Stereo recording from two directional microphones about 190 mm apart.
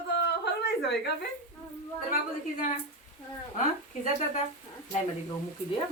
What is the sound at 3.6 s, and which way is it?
Speech, 40° left (ahead or behind).